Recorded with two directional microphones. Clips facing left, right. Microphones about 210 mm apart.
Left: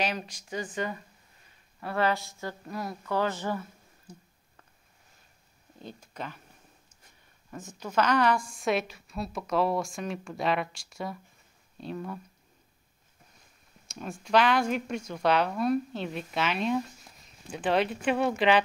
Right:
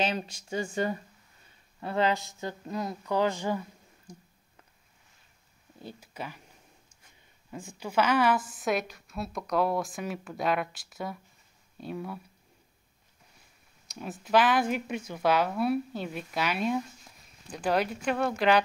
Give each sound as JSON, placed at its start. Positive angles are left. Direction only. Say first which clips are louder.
{"t": 0.0, "sound": "speech", "louder": "right 2 dB", "side_deg": -25}
{"t": 1.8, "sound": "speech", "louder": "right 1 dB", "side_deg": -20}
{"t": 4.1, "sound": "a sound", "louder": "even", "side_deg": 5}
{"t": 5.9, "sound": "speech", "louder": "left 1 dB", "side_deg": -10}
{"t": 7.5, "sound": "a woman's voice", "louder": "even", "side_deg": -10}
{"t": 13.8, "sound": "a woman's voice", "louder": "even", "side_deg": -5}